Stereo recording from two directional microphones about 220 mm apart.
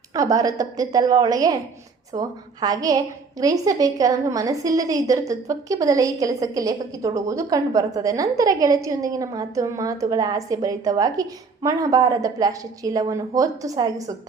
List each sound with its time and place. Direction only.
0.1 s a woman's voice: 15° right (ahead or behind)